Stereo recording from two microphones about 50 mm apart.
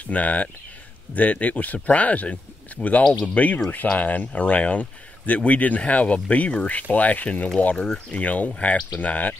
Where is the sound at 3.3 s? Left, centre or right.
Left.